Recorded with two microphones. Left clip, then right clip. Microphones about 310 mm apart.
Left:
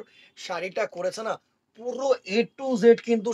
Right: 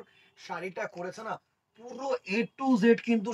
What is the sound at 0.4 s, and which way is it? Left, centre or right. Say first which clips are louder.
A man's voice: left 7 dB; left.